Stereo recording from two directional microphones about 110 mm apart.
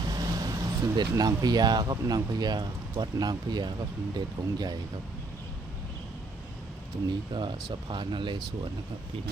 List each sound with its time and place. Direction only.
0.0 s speech: 35° right (ahead or behind)
7.3 s speech: 45° right (ahead or behind)